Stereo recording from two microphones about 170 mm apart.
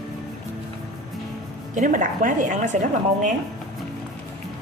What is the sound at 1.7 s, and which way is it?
A woman's voice, 50° right (ahead or behind).